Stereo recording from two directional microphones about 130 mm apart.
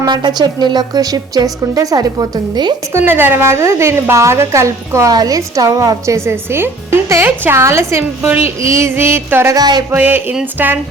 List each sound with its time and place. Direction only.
0.0 s a woman's voice: 35° right (ahead or behind)
2.9 s a woman's voice: 15° right (ahead or behind)
9.6 s a woman's voice: 30° right (ahead or behind)
9.9 s speech: 15° right (ahead or behind)